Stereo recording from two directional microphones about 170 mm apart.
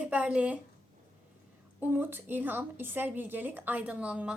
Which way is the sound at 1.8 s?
10° right (ahead or behind).